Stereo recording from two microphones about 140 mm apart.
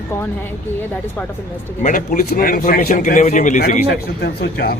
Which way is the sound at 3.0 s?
60° left (ahead or behind).